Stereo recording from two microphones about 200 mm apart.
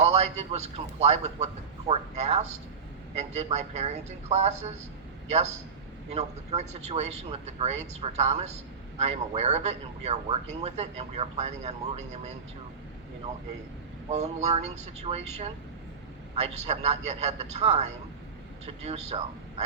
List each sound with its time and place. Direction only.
0.0 s speech: 30° right (ahead or behind)
6.1 s speech: 35° right (ahead or behind)
14.1 s speech: 35° right (ahead or behind)